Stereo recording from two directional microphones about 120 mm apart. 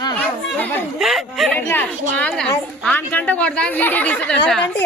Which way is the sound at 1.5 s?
15° left (ahead or behind).